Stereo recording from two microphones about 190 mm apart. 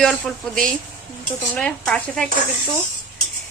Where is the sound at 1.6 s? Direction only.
5° left (ahead or behind).